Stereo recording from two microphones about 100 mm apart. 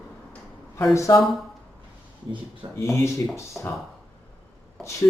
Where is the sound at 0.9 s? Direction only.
30° left (ahead or behind).